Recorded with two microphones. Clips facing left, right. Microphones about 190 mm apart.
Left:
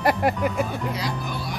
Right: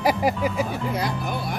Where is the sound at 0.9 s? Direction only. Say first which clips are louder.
Right 3 dB; 55° right (ahead or behind).